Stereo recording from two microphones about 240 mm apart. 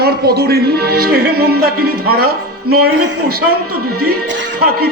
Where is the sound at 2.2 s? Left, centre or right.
Right.